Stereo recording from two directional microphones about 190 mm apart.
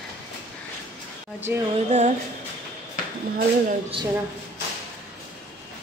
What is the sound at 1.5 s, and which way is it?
Speech, 10° right (ahead or behind).